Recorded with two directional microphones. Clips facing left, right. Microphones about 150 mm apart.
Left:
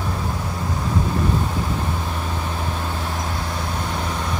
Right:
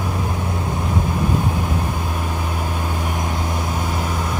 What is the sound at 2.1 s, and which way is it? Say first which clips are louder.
Vehicle: right 2 dB; 10° right (ahead or behind).